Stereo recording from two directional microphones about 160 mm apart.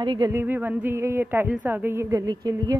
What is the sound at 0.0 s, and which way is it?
Speech, 30° right (ahead or behind).